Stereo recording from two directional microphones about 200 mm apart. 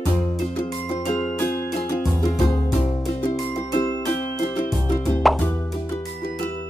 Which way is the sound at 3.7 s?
15° left (ahead or behind).